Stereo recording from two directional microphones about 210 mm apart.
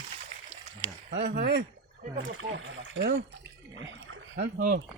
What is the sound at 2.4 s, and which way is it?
Speech, 65° right (ahead or behind).